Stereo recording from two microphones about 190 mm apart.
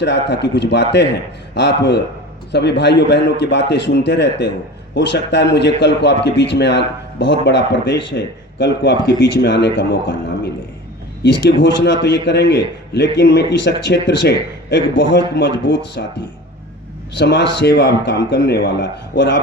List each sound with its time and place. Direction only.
0.0 s a man's voice: 65° left (ahead or behind)